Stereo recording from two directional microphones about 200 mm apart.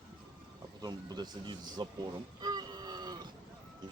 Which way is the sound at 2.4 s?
20° right (ahead or behind).